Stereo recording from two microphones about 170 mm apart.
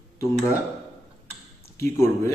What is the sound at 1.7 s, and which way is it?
Speech, 15° left (ahead or behind).